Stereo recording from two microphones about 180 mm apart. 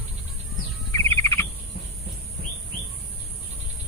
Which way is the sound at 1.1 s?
15° left (ahead or behind).